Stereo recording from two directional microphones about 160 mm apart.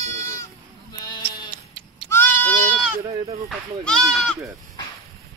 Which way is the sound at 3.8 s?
5° left (ahead or behind).